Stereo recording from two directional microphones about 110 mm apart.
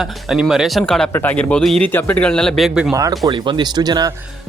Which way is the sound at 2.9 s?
30° right (ahead or behind).